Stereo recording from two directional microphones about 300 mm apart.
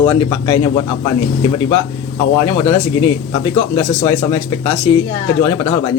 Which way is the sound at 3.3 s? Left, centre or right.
Centre.